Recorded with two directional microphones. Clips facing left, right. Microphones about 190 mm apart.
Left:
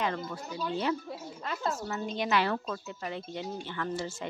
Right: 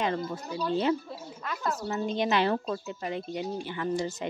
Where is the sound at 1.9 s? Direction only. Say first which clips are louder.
Right 7 dB; 25° right (ahead or behind).